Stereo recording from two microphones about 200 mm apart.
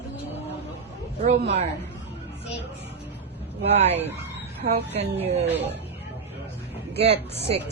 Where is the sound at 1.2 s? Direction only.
35° right (ahead or behind).